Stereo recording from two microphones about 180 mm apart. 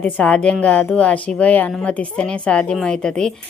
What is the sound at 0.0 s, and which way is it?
A woman's voice, 5° left (ahead or behind).